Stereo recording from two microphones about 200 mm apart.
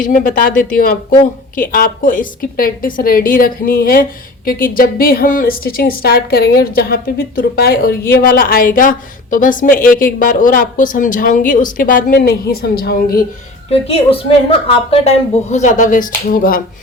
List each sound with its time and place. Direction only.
0.0 s a woman's voice: 40° left (ahead or behind)
13.7 s a woman's voice: 30° left (ahead or behind); by 16.6 s 45° left (ahead or behind)